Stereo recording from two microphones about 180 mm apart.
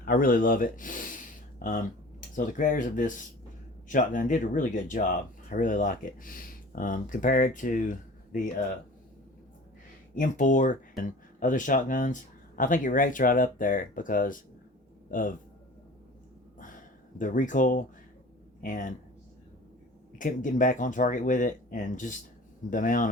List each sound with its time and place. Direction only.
0.0 s speech: 50° left (ahead or behind)
10.2 s speech: 45° left (ahead or behind)
17.2 s speech: 45° left (ahead or behind)
20.1 s speech: 45° left (ahead or behind)